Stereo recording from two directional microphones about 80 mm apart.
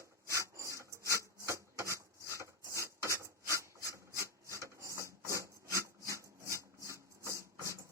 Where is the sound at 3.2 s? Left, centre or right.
Right.